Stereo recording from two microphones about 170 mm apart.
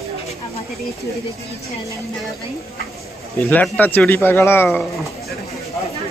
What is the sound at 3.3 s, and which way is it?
Speech, 15° left (ahead or behind).